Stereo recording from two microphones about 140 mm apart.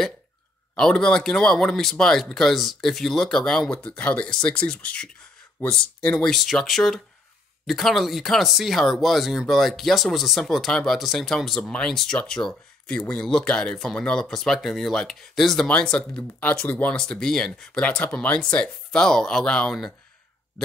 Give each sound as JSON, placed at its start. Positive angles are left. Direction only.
{"t": 0.7, "sound": "speech", "side_deg": 5}